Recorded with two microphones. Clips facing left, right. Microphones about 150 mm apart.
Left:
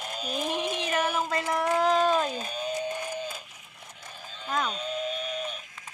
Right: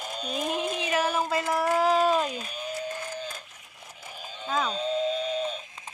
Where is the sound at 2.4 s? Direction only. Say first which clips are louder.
Left 3 dB; 30° left (ahead or behind).